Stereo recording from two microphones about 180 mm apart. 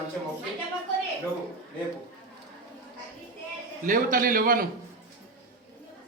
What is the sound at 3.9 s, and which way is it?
Speech, 50° right (ahead or behind).